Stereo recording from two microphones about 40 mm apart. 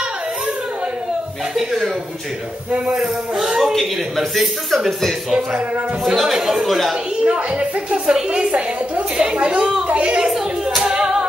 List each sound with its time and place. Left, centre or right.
2.9 s a man's voice: centre
3.7 s a man's voice: centre
7.2 s a woman's voice: right
9.1 s a woman's voice: centre
10.8 s music: centre